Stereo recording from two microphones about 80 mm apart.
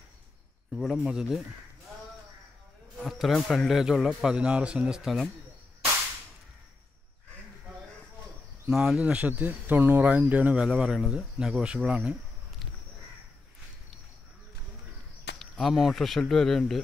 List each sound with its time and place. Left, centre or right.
0.9 s speech: centre
3.0 s speech: centre
8.6 s speech: centre
15.3 s speech: centre